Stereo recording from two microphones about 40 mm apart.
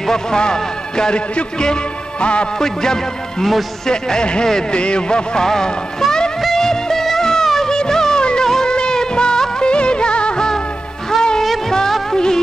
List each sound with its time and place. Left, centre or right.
0.0 s speech: centre
2.6 s speech: centre
6.4 s music: centre
8.5 s music of bollywood: centre
11.1 s music: centre